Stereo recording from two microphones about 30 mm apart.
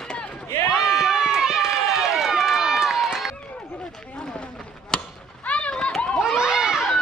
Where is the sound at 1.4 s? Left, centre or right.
Centre.